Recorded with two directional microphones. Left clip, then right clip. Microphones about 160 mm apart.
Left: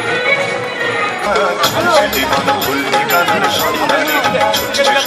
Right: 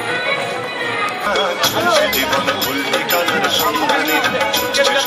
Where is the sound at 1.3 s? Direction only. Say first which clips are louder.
Left 4 dB; 15° left (ahead or behind).